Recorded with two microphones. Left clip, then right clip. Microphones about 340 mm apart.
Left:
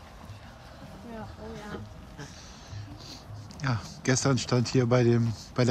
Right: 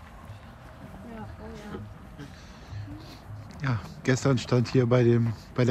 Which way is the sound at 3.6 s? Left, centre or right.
Centre.